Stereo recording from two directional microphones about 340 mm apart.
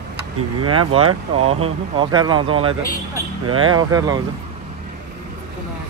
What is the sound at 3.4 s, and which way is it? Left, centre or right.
Speech, right.